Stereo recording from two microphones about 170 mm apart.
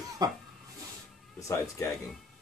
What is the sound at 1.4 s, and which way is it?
Speech, 20° left (ahead or behind).